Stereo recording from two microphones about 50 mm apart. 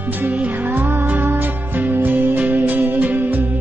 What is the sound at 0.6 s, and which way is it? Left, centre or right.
Music, right.